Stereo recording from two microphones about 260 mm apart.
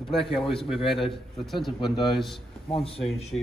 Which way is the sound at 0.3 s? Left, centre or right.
Centre.